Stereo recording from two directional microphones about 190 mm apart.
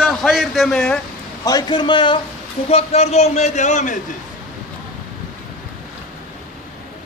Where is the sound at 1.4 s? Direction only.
20° left (ahead or behind); by 4.0 s 40° left (ahead or behind).